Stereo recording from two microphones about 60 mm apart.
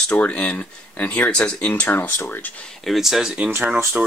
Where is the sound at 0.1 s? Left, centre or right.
Left.